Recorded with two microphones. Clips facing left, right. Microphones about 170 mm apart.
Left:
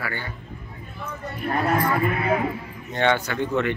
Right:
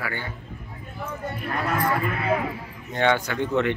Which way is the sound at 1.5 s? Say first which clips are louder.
Left 5 dB; 40° left (ahead or behind).